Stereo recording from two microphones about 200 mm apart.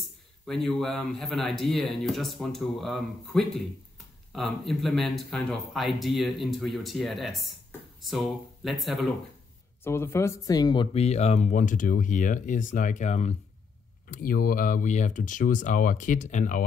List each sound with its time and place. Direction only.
0.0 s a man's voice: centre (ahead or behind)
9.8 s speech: 10° left (ahead or behind); by 13.3 s 35° left (ahead or behind)
14.0 s speech: 45° left (ahead or behind)